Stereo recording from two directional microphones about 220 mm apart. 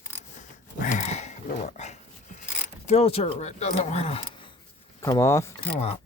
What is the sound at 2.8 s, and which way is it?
Speech, 30° left (ahead or behind).